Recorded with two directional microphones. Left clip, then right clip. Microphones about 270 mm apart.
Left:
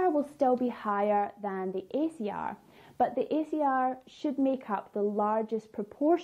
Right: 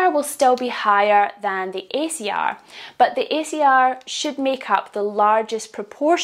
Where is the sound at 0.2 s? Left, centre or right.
Centre.